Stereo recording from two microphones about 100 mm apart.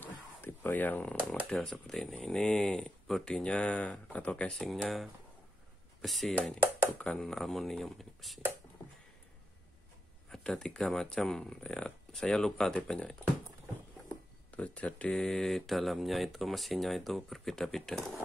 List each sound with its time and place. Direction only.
0.0 s a sound: 20° left (ahead or behind)
1.1 s speech: 15° right (ahead or behind)
1.5 s speech: 5° left (ahead or behind)
4.6 s speech: centre (ahead or behind)
10.3 s speech: 5° left (ahead or behind)
14.5 s speech: 15° left (ahead or behind)